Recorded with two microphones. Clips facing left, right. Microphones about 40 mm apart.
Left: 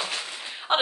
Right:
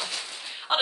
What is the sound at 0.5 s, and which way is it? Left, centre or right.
Gunshot, centre.